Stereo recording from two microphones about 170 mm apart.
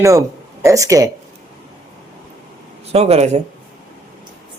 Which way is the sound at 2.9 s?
40° right (ahead or behind).